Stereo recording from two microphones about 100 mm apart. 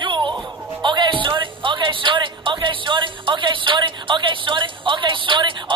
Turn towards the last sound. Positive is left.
turn(degrees=-55)  # may be behind; listen again after turning